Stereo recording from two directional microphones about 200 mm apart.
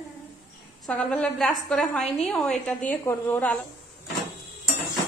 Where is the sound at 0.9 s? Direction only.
5° left (ahead or behind).